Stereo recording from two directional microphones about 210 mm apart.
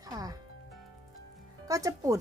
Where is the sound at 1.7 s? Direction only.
15° right (ahead or behind).